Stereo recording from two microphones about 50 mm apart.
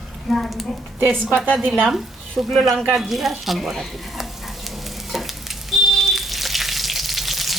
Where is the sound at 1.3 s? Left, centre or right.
Right.